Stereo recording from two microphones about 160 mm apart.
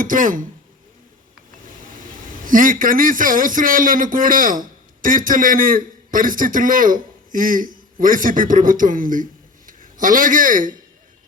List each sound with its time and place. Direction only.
0.0 s a man's voice: 60° right (ahead or behind)
2.3 s a man's voice: 60° right (ahead or behind)